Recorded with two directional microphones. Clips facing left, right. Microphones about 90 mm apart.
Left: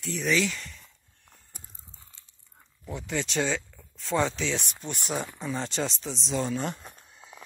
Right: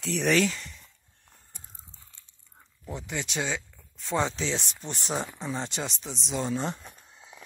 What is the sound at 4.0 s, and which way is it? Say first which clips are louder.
Speech: left 1 dB; 20° right (ahead or behind).